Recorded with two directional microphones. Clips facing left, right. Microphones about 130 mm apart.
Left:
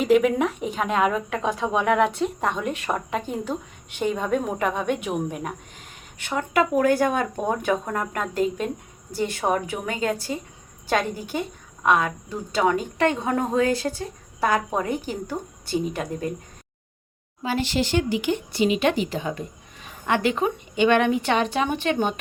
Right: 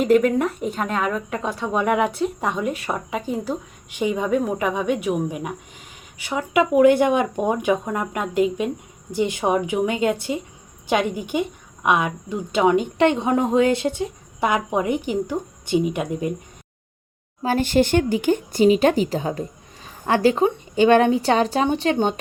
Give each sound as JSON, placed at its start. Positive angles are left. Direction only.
{"t": 0.0, "sound": "a woman's voice", "side_deg": 5}
{"t": 17.4, "sound": "a woman's voice", "side_deg": -45}